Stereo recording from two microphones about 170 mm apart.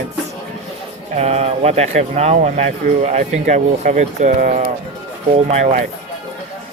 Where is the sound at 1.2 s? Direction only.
40° right (ahead or behind).